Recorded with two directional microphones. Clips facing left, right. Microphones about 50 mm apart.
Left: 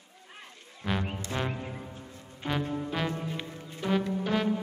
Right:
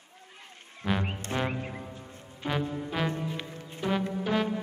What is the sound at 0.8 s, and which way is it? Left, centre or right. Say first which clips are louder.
Music: right 2 dB; centre.